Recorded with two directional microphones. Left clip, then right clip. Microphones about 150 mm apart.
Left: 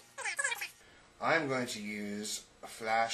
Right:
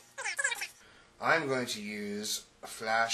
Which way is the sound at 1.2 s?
45° right (ahead or behind).